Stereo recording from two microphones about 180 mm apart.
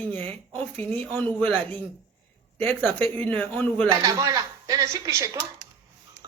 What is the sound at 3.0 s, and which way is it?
Speech, 10° left (ahead or behind).